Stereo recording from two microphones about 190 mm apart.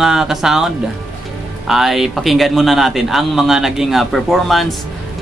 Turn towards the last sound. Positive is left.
turn(degrees=0)  # may be behind; listen again after turning